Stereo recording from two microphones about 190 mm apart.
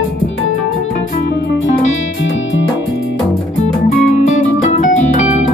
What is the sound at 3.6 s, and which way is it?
Music, 40° left (ahead or behind).